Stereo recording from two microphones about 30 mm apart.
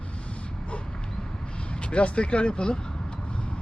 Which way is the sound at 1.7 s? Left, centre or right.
Left.